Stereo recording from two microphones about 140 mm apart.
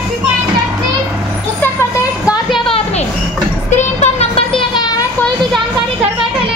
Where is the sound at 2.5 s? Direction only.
40° left (ahead or behind).